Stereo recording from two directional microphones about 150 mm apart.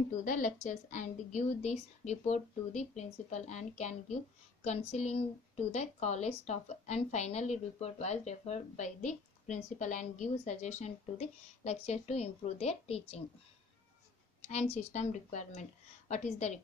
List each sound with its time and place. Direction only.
0.2 s a woman's voice: 60° left (ahead or behind); by 13.2 s 45° left (ahead or behind)
14.4 s a woman's voice: 45° left (ahead or behind)